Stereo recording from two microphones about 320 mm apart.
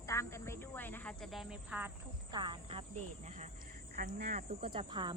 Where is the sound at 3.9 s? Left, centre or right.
Right.